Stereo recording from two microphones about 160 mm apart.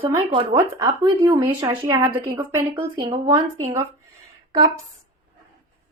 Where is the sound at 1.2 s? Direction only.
20° right (ahead or behind).